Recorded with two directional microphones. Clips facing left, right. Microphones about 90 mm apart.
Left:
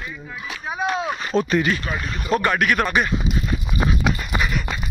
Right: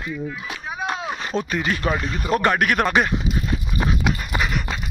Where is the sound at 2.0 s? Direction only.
35° right (ahead or behind).